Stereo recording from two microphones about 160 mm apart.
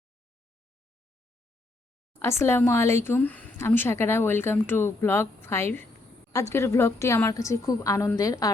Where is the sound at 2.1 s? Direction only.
15° left (ahead or behind).